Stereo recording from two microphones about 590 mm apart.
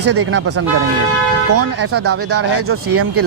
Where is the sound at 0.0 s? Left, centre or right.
Right.